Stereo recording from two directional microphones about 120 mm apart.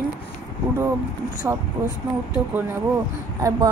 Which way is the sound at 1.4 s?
15° right (ahead or behind).